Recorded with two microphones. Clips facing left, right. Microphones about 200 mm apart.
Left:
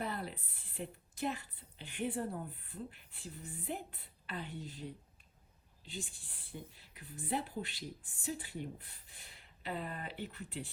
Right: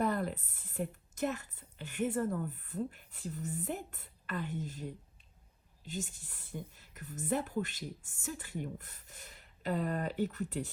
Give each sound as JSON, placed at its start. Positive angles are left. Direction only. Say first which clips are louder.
{"t": 0.0, "sound": "a woman's voice", "louder": "right 8 dB", "side_deg": -45}
{"t": 5.9, "sound": "a woman's voice", "louder": "right 5 dB", "side_deg": -45}